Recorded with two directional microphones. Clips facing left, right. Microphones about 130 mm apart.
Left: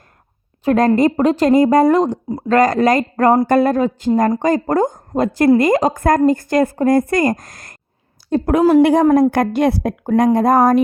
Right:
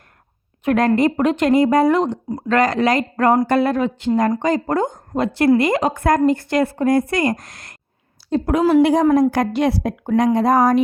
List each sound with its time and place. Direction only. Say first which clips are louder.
0.6 s a woman's voice: left 3 dB; 35° left (ahead or behind)